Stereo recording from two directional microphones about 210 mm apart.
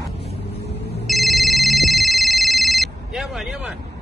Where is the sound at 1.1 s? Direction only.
Centre (ahead or behind).